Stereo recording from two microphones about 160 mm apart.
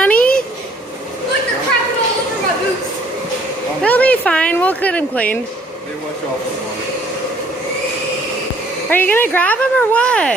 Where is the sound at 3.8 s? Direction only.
10° left (ahead or behind).